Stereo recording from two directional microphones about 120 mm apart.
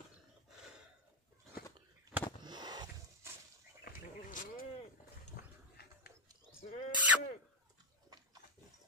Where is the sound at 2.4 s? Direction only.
35° right (ahead or behind).